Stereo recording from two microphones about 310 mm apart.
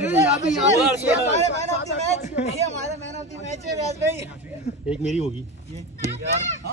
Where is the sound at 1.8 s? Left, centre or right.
Left.